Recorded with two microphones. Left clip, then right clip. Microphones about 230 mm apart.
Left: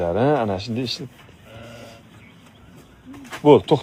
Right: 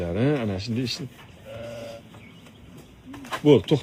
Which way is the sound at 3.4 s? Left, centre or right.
Left.